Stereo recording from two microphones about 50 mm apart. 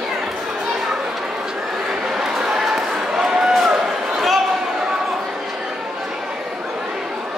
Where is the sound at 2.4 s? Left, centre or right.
Centre.